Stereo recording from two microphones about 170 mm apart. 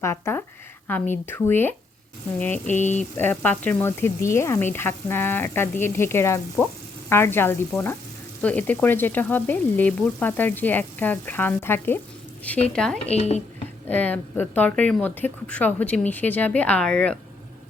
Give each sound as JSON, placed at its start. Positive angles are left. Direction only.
{"t": 0.0, "sound": "frying", "side_deg": 15}
{"t": 2.6, "sound": "speech", "side_deg": 45}
{"t": 3.2, "sound": "frying", "side_deg": 10}
{"t": 12.6, "sound": "speech", "side_deg": 5}
{"t": 13.1, "sound": "speech", "side_deg": 40}
{"t": 13.8, "sound": "frying", "side_deg": 10}